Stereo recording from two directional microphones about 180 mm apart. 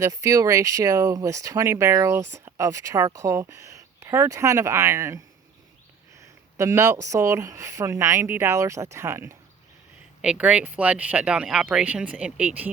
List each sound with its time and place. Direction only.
0.0 s speech: 20° right (ahead or behind)
6.6 s speech: 15° right (ahead or behind)